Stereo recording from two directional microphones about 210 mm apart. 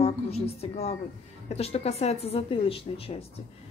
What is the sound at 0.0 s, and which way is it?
A woman's voice, 30° left (ahead or behind).